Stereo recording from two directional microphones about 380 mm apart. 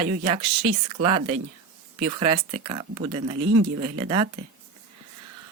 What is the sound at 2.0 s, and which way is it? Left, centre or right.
Speech, right.